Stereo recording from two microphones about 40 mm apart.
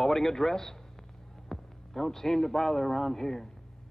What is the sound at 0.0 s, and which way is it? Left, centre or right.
A man's voice, centre.